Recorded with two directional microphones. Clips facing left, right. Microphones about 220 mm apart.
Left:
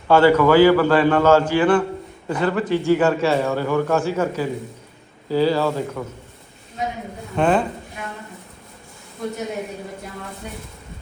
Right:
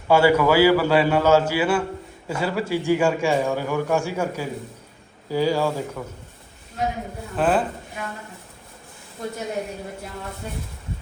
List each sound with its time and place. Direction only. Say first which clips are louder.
0.1 s a man's voice: left 3 dB; 10° right (ahead or behind)
7.3 s speech: left 2 dB; 5° right (ahead or behind)